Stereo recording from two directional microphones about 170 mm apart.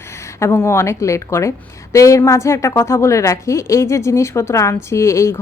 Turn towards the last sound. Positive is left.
turn(degrees=15)  # may be behind; listen again after turning